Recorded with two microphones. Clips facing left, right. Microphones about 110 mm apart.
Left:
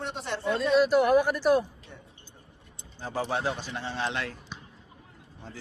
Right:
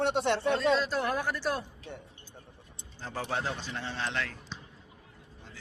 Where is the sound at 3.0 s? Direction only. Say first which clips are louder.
Left 4 dB; 10° left (ahead or behind).